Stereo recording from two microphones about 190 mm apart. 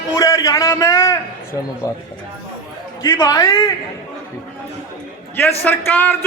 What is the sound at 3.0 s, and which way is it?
Speech, 15° left (ahead or behind).